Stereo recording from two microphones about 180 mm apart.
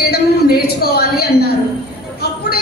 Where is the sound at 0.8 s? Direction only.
60° left (ahead or behind).